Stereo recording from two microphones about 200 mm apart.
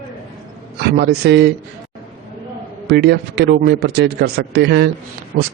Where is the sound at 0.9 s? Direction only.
50° right (ahead or behind).